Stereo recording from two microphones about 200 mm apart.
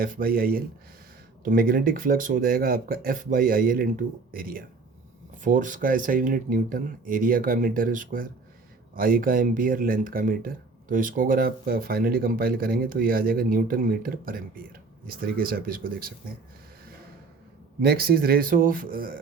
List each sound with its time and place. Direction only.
0.0 s speech: 45° right (ahead or behind)
17.8 s speech: 50° right (ahead or behind)